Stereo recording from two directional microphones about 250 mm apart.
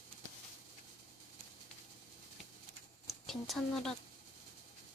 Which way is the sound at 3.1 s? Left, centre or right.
Centre.